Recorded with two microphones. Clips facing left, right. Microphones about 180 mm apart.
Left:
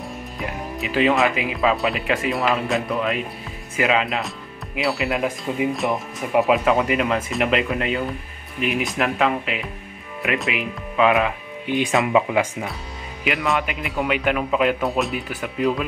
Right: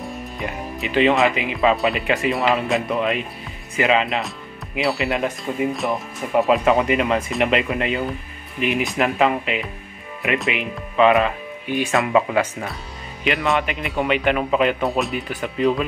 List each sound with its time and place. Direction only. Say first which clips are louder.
0.0 s speech: right 2 dB; centre (ahead or behind)
11.6 s speech: left 1 dB; 20° left (ahead or behind)
13.2 s speech: right 2 dB; centre (ahead or behind)